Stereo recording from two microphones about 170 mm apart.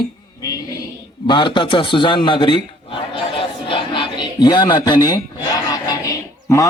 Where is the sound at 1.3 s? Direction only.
30° left (ahead or behind).